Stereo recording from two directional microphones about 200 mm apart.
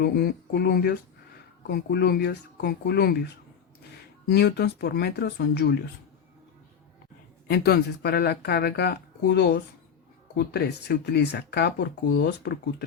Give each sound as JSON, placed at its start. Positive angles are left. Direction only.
{"t": 0.0, "sound": "speech", "side_deg": 50}
{"t": 4.3, "sound": "speech", "side_deg": 55}
{"t": 7.4, "sound": "speech", "side_deg": 55}